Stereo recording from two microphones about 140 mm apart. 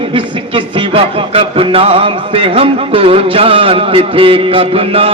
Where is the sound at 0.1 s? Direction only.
40° right (ahead or behind).